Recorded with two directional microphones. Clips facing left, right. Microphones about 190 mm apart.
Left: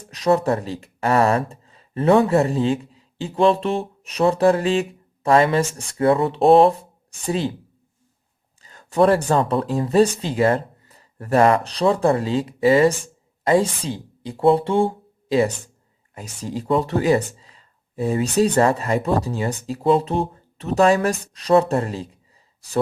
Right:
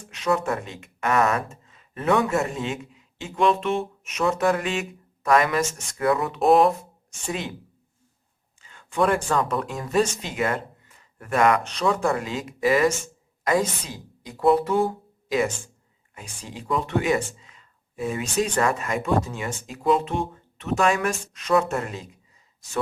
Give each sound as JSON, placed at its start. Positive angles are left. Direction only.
{"t": 0.1, "sound": "speech", "side_deg": 35}
{"t": 8.6, "sound": "speech", "side_deg": 40}